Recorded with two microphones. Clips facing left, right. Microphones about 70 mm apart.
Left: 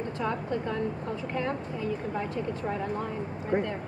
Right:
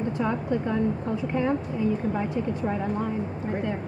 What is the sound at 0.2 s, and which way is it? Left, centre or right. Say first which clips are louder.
A woman's voice: right 3 dB; centre.